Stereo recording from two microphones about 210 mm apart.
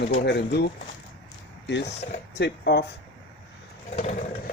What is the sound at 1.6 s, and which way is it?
Speech, 55° left (ahead or behind).